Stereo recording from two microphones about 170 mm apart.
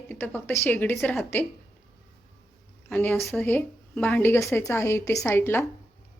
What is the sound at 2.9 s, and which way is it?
A woman's voice, 10° left (ahead or behind).